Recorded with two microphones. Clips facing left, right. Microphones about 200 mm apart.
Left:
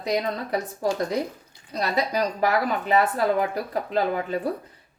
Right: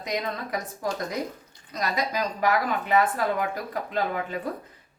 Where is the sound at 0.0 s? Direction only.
30° left (ahead or behind).